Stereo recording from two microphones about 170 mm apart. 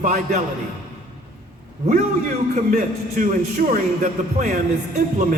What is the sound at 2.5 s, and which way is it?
A man's voice, 50° right (ahead or behind).